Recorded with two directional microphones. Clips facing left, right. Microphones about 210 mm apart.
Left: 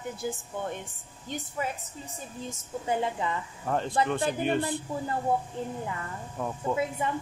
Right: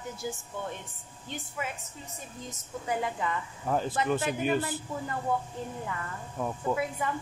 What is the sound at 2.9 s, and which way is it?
Speech, 25° left (ahead or behind).